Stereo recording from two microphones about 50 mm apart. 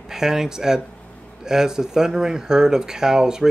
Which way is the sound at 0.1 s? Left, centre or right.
Centre.